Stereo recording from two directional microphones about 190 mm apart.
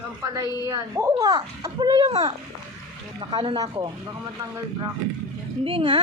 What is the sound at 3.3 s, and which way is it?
Speech, 25° right (ahead or behind).